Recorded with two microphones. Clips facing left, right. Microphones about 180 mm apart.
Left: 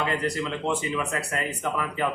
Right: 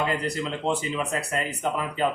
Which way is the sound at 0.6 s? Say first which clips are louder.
Right 2 dB; 35° right (ahead or behind).